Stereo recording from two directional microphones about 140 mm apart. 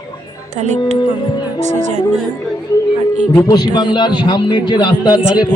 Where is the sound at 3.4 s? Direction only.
30° left (ahead or behind).